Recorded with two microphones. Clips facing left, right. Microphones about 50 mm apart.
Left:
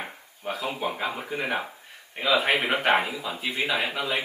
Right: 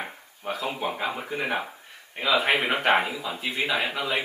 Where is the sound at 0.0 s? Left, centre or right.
Centre.